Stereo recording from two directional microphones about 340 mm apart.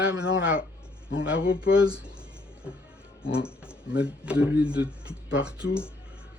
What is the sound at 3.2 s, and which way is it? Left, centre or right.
Speech, centre.